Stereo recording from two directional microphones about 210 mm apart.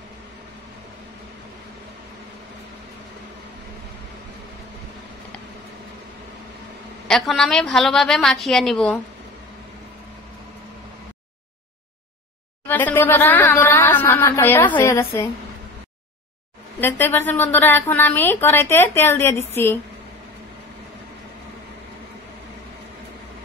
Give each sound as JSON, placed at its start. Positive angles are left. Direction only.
{"t": 7.1, "sound": "a woman's voice", "side_deg": 0}
{"t": 12.6, "sound": "a sound", "side_deg": 10}
{"t": 17.3, "sound": "speech", "side_deg": 10}